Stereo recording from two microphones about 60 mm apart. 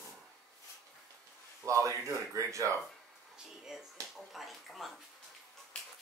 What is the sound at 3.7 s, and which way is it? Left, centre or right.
Speech, centre.